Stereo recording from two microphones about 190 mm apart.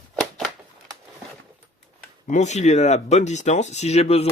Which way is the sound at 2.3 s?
40° left (ahead or behind).